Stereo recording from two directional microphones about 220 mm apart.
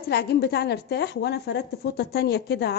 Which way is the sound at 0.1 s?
45° left (ahead or behind).